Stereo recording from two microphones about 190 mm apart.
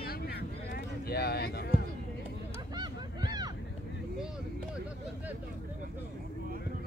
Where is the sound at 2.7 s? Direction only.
20° right (ahead or behind).